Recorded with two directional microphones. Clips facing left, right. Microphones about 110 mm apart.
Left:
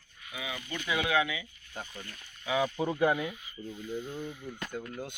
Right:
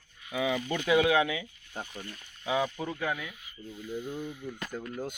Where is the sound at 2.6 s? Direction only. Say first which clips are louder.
Left 2 dB; 15° left (ahead or behind).